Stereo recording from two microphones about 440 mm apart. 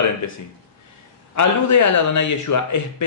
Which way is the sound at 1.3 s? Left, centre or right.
Left.